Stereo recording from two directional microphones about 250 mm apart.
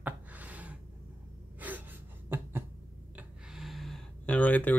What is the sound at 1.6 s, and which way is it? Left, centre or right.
Gasp, centre.